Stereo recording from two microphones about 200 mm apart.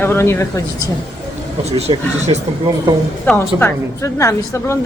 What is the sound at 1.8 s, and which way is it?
Speech, 30° right (ahead or behind).